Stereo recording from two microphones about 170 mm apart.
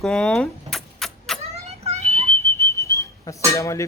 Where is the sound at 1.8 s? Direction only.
40° right (ahead or behind).